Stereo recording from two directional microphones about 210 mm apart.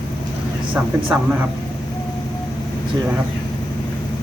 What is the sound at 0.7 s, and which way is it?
Speech, 10° right (ahead or behind).